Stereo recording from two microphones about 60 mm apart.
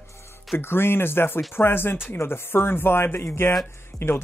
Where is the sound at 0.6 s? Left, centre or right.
Left.